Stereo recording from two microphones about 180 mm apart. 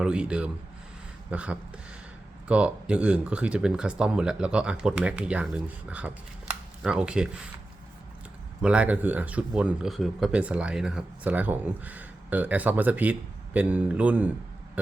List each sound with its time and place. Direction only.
0.0 s speech: 5° right (ahead or behind)
8.6 s speech: 5° right (ahead or behind)